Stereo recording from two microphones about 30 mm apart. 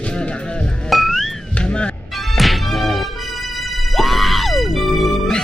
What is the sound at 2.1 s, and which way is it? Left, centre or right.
Music, centre.